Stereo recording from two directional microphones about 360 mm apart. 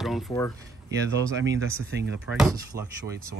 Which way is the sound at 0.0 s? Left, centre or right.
Centre.